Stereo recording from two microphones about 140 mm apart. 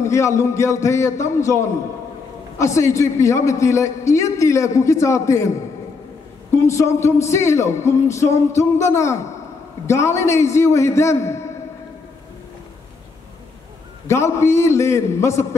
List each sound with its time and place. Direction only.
0.0 s a man's voice: 20° left (ahead or behind)
6.5 s a man's voice: 20° left (ahead or behind)
14.0 s a man's voice: 20° left (ahead or behind)